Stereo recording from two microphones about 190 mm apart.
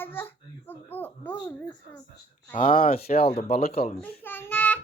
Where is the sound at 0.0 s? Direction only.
10° left (ahead or behind).